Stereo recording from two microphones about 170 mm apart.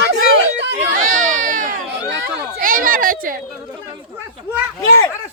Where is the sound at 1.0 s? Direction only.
50° right (ahead or behind).